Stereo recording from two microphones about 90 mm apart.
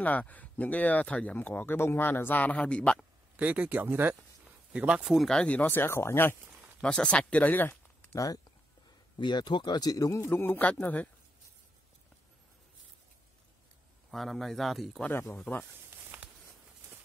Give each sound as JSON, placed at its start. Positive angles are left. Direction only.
{"t": 0.0, "sound": "speech", "side_deg": 15}
{"t": 3.3, "sound": "speech", "side_deg": -15}
{"t": 4.7, "sound": "speech", "side_deg": -10}
{"t": 6.8, "sound": "speech", "side_deg": 10}
{"t": 9.2, "sound": "a man's voice", "side_deg": 55}
{"t": 14.1, "sound": "speech", "side_deg": 0}
{"t": 15.3, "sound": "speech", "side_deg": 15}
{"t": 15.9, "sound": "a sound", "side_deg": -15}